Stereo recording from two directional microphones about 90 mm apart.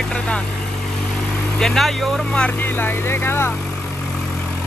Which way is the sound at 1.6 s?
5° left (ahead or behind).